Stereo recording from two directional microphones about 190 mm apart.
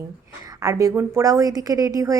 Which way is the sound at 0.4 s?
20° right (ahead or behind).